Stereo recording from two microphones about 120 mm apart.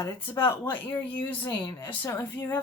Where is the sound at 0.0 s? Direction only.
25° left (ahead or behind).